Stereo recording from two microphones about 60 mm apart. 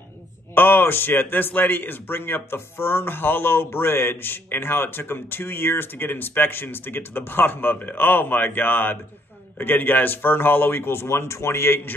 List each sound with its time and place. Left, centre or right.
0.6 s a man's voice: left